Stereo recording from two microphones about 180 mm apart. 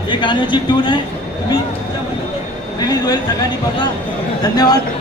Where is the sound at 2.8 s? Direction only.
20° left (ahead or behind).